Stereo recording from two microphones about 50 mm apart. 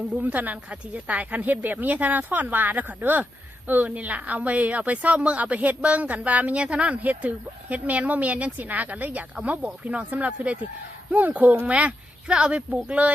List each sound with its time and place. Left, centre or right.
0.2 s a woman's voice: right